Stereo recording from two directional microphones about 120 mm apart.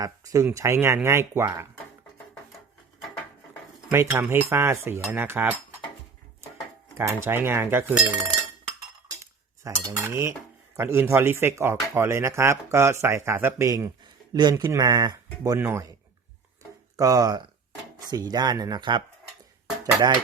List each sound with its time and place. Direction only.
0.0 s speech: 30° right (ahead or behind)
3.9 s speech: 20° right (ahead or behind)
6.9 s speech: 20° right (ahead or behind)
9.2 s cutlery: 25° right (ahead or behind)
10.8 s speech: 20° right (ahead or behind)
15.5 s speech: 20° right (ahead or behind)
17.0 s speech: 30° right (ahead or behind)